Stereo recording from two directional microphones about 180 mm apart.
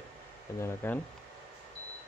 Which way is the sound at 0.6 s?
15° left (ahead or behind).